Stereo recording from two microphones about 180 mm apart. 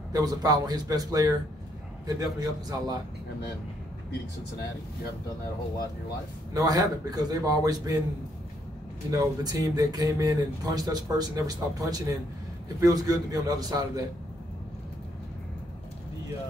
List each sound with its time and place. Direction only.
0.1 s speech: 20° right (ahead or behind)
6.5 s speech: 20° right (ahead or behind)
9.1 s speech: 20° right (ahead or behind)